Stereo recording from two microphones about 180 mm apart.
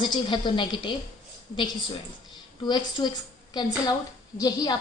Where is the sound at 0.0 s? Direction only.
25° left (ahead or behind).